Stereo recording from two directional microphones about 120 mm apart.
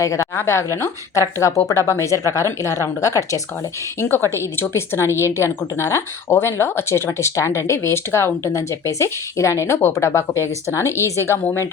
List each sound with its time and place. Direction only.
0.0 s a woman's voice: 25° left (ahead or behind)